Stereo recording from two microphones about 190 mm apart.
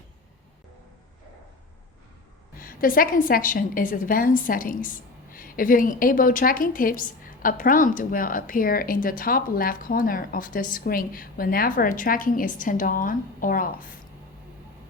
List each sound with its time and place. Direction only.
2.6 s speech: 50° left (ahead or behind)